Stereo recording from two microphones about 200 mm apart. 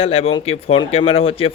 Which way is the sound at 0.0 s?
30° left (ahead or behind).